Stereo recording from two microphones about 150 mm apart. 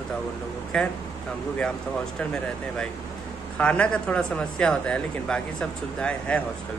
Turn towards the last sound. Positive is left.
turn(degrees=10)  # may be behind; listen again after turning